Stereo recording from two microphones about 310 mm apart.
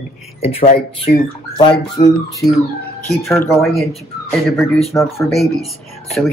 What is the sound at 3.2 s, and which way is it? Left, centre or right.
Speech, centre.